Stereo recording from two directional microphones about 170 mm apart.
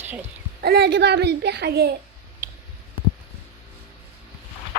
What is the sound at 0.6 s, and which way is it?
A woman's voice, 70° right (ahead or behind).